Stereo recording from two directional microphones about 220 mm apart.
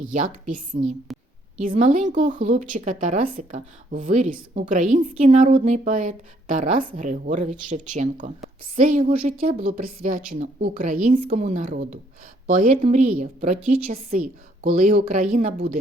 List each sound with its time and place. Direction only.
0.1 s speech: 35° right (ahead or behind)